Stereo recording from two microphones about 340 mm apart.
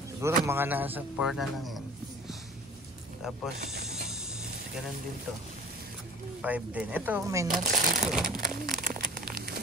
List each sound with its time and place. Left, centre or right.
0.2 s a man's voice: centre
6.4 s a man's voice: centre
7.6 s speech: right
8.4 s a sound: right